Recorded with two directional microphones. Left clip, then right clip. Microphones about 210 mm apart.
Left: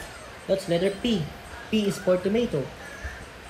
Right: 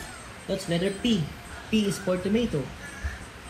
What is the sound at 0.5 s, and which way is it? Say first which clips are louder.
Speech: left 5 dB; 20° left (ahead or behind).